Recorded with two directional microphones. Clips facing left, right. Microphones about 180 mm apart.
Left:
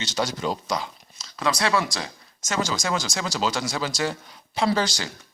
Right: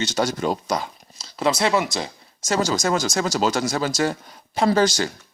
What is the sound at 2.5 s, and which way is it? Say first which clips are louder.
Speech: right 5 dB; 40° right (ahead or behind).